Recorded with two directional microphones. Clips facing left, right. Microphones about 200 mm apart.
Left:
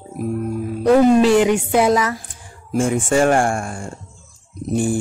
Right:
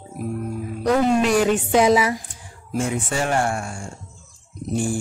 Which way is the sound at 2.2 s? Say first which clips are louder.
Left 2 dB; 50° left (ahead or behind).